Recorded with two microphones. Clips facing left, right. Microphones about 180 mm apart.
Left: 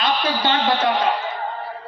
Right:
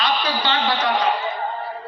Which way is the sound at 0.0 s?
50° left (ahead or behind).